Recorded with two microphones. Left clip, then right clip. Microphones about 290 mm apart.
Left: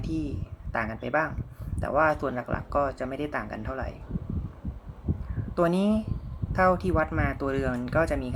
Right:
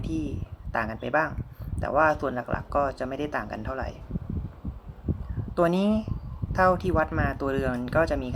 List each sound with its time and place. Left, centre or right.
0.0 s speech: centre
5.5 s speech: centre